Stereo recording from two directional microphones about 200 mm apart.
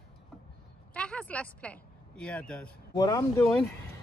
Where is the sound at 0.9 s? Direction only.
5° left (ahead or behind).